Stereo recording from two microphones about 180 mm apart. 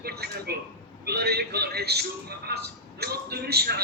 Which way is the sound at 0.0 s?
60° right (ahead or behind).